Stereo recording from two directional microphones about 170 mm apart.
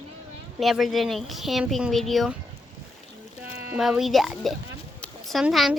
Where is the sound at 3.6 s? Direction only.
5° right (ahead or behind).